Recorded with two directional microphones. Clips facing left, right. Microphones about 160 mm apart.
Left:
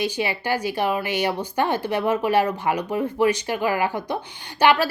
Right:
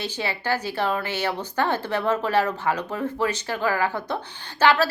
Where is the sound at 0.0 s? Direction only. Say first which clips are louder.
Left 4 dB; 15° left (ahead or behind).